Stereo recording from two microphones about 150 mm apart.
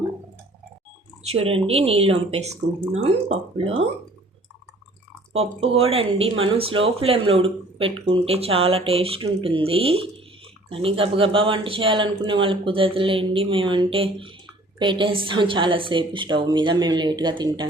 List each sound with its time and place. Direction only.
1.2 s speech: 40° right (ahead or behind)
5.3 s speech: 40° right (ahead or behind)